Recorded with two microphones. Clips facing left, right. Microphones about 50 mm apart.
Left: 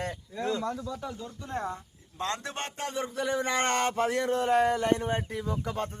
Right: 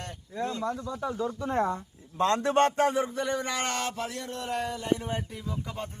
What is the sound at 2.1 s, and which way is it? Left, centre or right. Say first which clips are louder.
Speech: right 10 dB; right.